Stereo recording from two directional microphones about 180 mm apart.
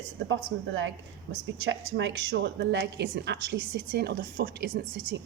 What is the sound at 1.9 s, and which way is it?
A woman's voice, 80° right.